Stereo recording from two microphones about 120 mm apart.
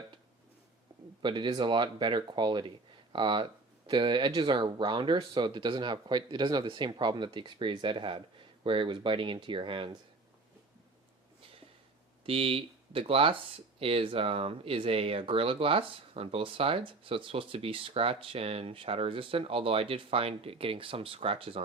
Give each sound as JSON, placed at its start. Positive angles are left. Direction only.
{"t": 1.2, "sound": "speech", "side_deg": -40}
{"t": 12.2, "sound": "speech", "side_deg": -50}